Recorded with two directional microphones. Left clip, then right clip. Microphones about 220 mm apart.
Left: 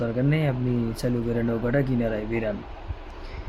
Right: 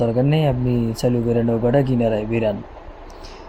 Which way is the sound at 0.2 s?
15° right (ahead or behind).